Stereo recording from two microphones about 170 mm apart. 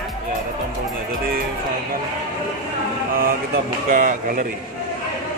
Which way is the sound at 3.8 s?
50° right (ahead or behind).